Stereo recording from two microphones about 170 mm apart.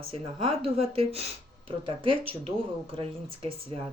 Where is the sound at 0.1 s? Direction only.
30° right (ahead or behind).